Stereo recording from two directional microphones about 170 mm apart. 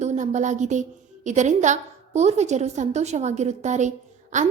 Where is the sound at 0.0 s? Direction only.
45° right (ahead or behind).